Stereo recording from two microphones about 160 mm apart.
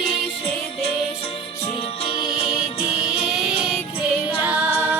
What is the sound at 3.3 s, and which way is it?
Music, centre (ahead or behind).